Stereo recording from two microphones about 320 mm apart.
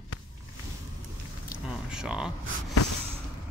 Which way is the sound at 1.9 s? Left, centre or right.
Centre.